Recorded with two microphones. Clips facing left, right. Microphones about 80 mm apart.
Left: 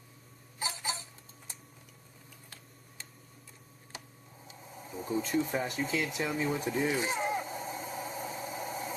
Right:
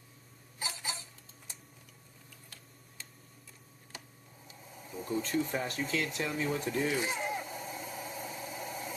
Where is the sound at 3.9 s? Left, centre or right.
Left.